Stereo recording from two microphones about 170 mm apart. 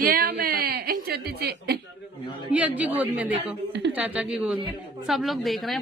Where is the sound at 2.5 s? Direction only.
10° right (ahead or behind).